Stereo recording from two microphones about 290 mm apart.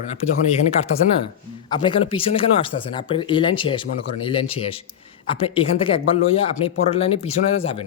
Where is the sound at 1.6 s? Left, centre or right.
Centre.